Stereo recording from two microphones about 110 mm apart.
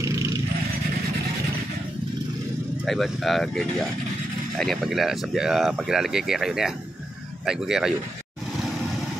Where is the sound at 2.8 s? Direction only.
Centre (ahead or behind).